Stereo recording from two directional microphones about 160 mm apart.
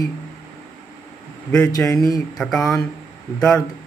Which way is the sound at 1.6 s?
20° left (ahead or behind).